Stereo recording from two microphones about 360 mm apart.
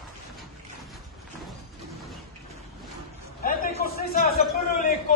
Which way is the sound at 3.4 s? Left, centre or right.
Left.